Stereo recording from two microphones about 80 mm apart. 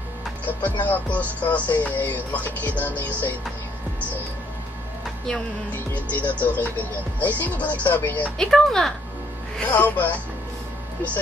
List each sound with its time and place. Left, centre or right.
0.5 s music: left
6.1 s music: centre
8.4 s speech: centre
9.7 s music: left